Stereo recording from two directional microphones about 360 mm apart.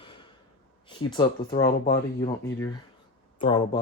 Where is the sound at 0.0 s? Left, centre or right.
Centre.